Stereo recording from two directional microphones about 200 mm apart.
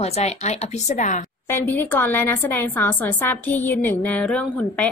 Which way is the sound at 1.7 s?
10° left (ahead or behind).